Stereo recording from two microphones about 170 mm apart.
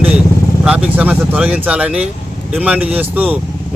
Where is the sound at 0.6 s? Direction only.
5° right (ahead or behind).